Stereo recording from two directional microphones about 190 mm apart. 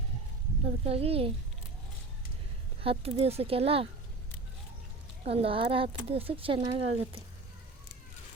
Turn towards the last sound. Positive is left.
turn(degrees=-30)  # may be behind; listen again after turning